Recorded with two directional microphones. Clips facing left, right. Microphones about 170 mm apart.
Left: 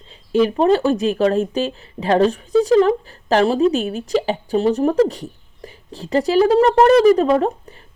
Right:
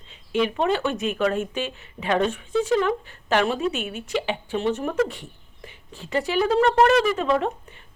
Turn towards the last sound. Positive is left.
turn(degrees=40)  # may be behind; listen again after turning